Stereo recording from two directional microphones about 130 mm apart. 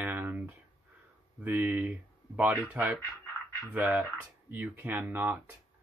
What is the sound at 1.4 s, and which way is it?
Speech, 10° right (ahead or behind).